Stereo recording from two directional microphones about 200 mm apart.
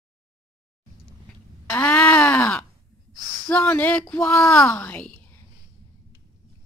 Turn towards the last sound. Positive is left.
turn(degrees=10)  # may be behind; listen again after turning